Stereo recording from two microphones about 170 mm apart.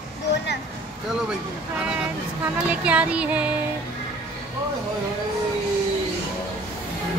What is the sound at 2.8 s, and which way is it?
Speech, 5° right (ahead or behind).